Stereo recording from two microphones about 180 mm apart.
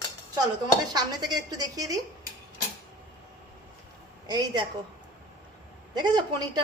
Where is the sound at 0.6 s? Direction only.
25° right (ahead or behind).